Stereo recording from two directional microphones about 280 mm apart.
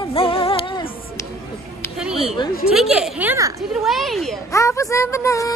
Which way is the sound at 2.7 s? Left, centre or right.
Centre.